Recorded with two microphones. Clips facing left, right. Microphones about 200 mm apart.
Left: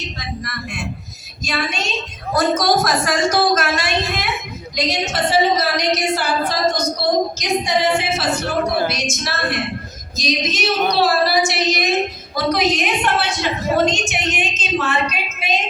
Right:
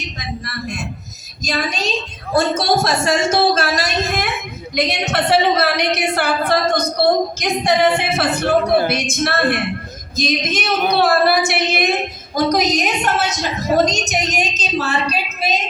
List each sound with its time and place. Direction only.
0.4 s a man's voice: 40° right (ahead or behind)
4.7 s a woman's voice: 60° right (ahead or behind)
12.5 s a woman's voice: 40° right (ahead or behind)